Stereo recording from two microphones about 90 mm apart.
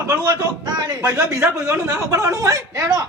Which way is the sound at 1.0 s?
25° right (ahead or behind).